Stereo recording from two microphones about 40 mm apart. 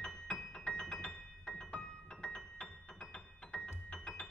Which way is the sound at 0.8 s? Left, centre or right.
Centre.